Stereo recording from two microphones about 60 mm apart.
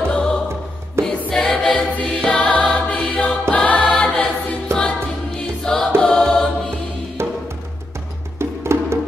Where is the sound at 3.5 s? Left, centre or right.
Left.